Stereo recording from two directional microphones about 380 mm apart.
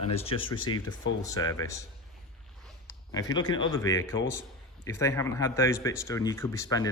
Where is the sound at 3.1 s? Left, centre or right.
Centre.